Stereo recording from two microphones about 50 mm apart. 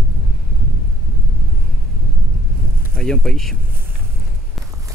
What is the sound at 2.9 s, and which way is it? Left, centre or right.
Speech, centre.